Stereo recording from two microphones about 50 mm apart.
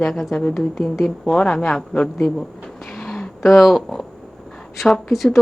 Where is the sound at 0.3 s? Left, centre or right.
Centre.